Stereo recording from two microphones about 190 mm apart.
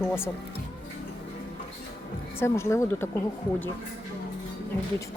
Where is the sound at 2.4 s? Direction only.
15° left (ahead or behind).